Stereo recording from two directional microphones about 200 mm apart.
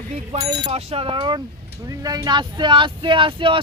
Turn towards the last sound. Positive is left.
turn(degrees=-25)  # may be behind; listen again after turning